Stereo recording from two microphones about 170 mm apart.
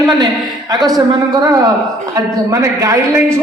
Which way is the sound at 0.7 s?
20° right (ahead or behind).